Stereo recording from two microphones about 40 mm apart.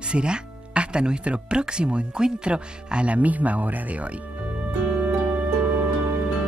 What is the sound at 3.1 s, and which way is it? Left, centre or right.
Speech, right.